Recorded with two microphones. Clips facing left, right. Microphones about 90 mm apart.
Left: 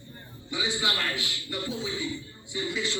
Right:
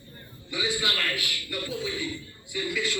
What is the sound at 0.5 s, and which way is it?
A man's voice, 25° left (ahead or behind).